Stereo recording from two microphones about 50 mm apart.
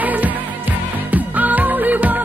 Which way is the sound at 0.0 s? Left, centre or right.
Right.